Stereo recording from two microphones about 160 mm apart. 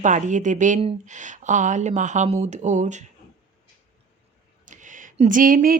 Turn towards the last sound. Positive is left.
turn(degrees=-60)  # may be behind; listen again after turning